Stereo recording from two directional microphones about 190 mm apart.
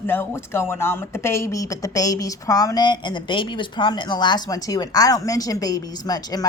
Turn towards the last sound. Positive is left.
turn(degrees=20)  # may be behind; listen again after turning